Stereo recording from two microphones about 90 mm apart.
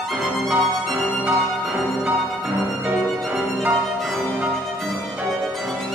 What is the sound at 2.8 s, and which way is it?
Music, 5° right (ahead or behind).